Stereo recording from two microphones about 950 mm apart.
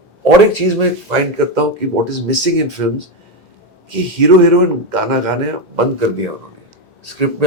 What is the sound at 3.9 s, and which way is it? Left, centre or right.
A man's voice, right.